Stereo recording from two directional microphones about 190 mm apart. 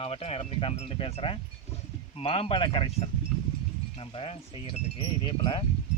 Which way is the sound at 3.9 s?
30° left (ahead or behind).